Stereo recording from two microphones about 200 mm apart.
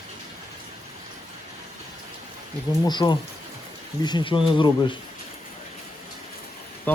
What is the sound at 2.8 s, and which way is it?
Speech, 20° left (ahead or behind).